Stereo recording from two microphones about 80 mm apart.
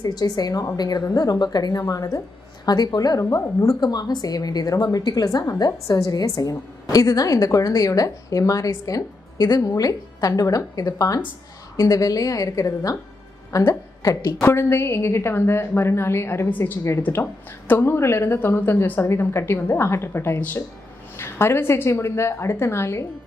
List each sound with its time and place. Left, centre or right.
0.0 s a woman's voice: left
3.3 s a woman's voice: left
3.8 s a woman's voice: left
5.4 s a woman's voice: left
14.4 s a woman's voice: left